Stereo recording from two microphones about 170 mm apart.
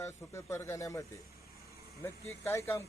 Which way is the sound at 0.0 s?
15° left (ahead or behind).